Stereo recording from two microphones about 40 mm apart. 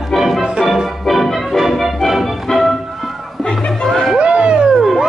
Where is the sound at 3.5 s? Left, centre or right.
Centre.